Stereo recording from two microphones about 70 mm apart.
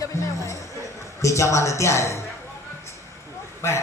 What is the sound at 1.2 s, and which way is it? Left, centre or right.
Speech, left.